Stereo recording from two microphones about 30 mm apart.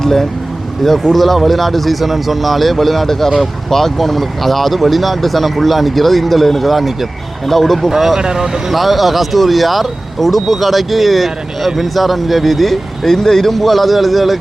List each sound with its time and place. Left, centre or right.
0.0 s speech: centre
7.9 s speech: centre
8.7 s speech: centre